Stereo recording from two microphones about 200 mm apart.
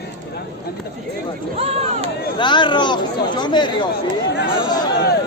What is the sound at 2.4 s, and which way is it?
Speech, 25° left (ahead or behind).